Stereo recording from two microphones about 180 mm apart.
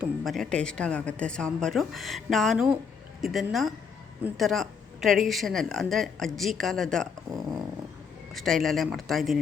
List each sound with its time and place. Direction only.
0.0 s a woman's voice: centre (ahead or behind)
7.3 s dog: 20° right (ahead or behind)
8.3 s a woman's voice: centre (ahead or behind)